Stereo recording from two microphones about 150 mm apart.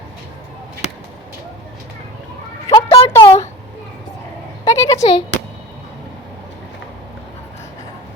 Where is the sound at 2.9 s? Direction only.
45° left (ahead or behind).